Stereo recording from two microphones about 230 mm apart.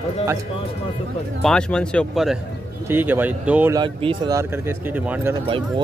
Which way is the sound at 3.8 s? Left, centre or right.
Centre.